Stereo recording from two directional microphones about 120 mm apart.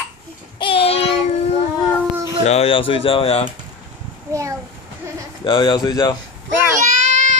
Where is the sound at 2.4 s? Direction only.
60° left (ahead or behind).